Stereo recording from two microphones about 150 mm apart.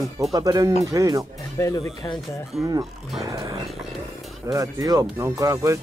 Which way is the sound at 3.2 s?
20° right (ahead or behind).